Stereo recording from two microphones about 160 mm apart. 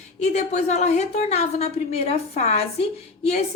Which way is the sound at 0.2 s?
45° left (ahead or behind).